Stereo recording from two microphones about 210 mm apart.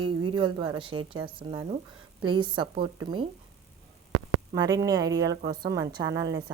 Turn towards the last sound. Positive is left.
turn(degrees=-15)  # may be behind; listen again after turning